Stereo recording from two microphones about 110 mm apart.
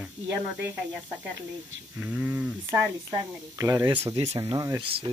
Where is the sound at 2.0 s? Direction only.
10° right (ahead or behind).